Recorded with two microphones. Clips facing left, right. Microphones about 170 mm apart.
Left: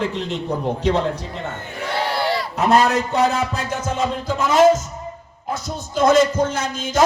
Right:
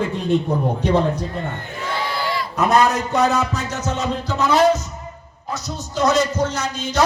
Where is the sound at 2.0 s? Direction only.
70° left (ahead or behind).